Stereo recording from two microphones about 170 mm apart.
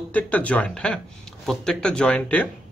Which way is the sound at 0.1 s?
10° left (ahead or behind).